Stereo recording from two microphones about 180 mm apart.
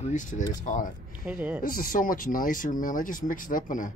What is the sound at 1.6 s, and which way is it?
Speech, 50° left (ahead or behind).